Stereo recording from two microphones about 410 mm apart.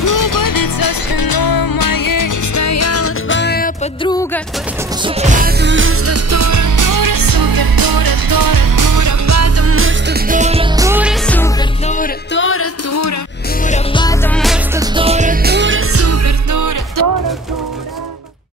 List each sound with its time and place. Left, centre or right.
0.0 s music: left; by 4.4 s centre
5.0 s music: centre
11.8 s music: centre; by 13.1 s left
13.7 s music: centre; by 17.2 s right